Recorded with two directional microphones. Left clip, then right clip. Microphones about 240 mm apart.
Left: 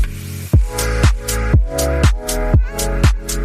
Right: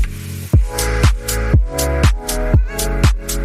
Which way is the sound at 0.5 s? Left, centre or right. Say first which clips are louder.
Even; centre.